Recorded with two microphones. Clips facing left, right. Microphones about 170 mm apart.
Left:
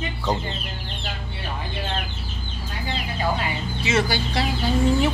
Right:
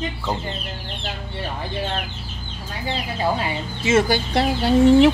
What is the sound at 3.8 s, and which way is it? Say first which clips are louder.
Speech: right 5 dB; 50° right (ahead or behind).